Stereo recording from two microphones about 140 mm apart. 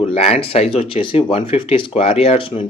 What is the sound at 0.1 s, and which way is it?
A man's voice, 50° left (ahead or behind).